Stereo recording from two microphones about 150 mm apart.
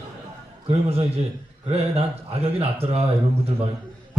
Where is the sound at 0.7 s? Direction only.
45° right (ahead or behind).